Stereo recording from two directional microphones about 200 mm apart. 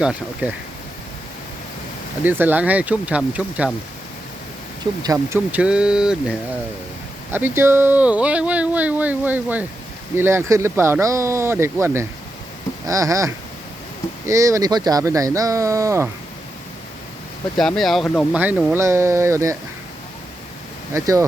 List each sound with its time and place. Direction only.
0.0 s speech: 5° right (ahead or behind)
2.2 s speech: 10° right (ahead or behind)
5.0 s speech: 15° right (ahead or behind)
7.3 s speech: 10° right (ahead or behind)
17.6 s speech: centre (ahead or behind)
18.3 s speech: 10° right (ahead or behind)
20.9 s speech: 15° right (ahead or behind)